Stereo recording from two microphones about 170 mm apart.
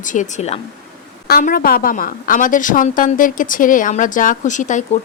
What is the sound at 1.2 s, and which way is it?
A woman's voice, 60° left (ahead or behind).